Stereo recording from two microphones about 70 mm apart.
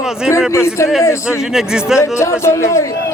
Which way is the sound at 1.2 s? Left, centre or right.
Centre.